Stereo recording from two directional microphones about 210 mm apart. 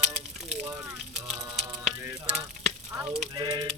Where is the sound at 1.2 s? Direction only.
Centre (ahead or behind).